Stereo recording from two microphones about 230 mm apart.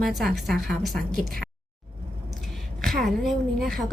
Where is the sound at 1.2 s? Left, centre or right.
Right.